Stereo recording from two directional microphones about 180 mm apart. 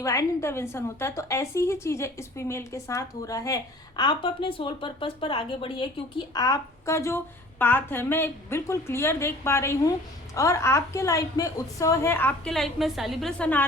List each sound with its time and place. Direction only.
0.0 s a woman's voice: 15° left (ahead or behind)
12.5 s a woman's voice: centre (ahead or behind)